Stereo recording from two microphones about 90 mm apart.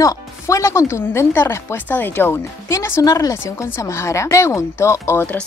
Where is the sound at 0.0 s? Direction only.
35° left (ahead or behind).